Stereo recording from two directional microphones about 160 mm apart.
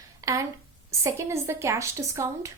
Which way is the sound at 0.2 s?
20° right (ahead or behind).